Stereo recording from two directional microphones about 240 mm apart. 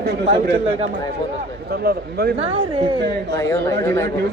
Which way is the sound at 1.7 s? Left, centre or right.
Right.